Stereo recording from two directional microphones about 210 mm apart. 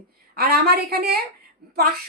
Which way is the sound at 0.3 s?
50° right (ahead or behind).